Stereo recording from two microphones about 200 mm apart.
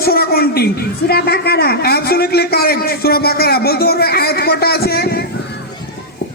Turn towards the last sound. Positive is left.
turn(degrees=50)  # may be behind; listen again after turning